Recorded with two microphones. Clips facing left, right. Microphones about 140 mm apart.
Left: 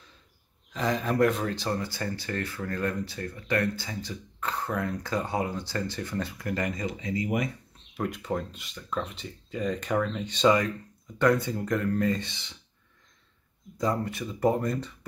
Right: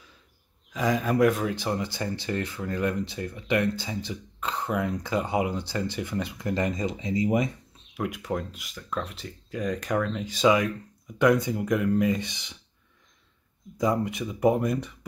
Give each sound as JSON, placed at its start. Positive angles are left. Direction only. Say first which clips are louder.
{"t": 0.7, "sound": "speech", "louder": "right 2 dB", "side_deg": -5}
{"t": 7.9, "sound": "speech", "louder": "right 1 dB", "side_deg": -5}
{"t": 13.7, "sound": "speech", "louder": "right 3 dB", "side_deg": -15}